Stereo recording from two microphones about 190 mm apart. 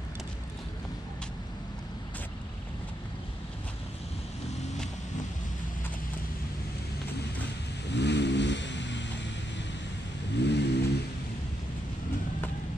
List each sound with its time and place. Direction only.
7.9 s vehicle: 65° left (ahead or behind)
10.4 s vehicle: 65° left (ahead or behind)